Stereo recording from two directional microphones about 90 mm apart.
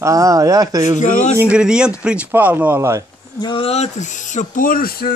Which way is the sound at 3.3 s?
55° left (ahead or behind).